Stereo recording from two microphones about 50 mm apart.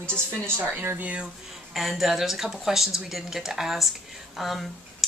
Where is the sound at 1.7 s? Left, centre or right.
Centre.